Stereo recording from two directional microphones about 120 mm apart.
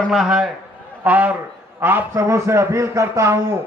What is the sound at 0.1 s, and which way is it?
A man's voice, 5° right (ahead or behind).